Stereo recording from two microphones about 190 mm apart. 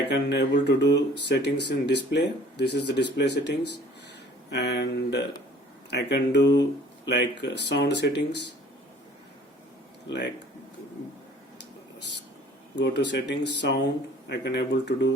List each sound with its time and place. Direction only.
0.1 s speech: 65° left (ahead or behind)
6.5 s speech: 20° left (ahead or behind)
7.1 s speech: 65° left (ahead or behind)
10.1 s speech: 65° left (ahead or behind)
12.7 s speech: 65° left (ahead or behind)